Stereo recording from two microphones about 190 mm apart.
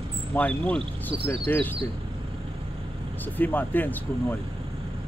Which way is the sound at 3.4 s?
10° left (ahead or behind).